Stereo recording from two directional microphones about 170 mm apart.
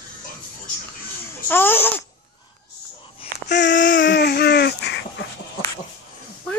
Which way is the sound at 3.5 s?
90° left.